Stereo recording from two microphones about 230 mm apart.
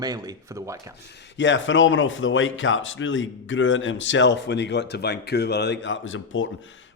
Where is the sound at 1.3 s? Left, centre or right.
Left.